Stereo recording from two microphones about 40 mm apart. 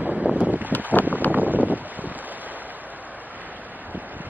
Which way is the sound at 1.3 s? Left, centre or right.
Right.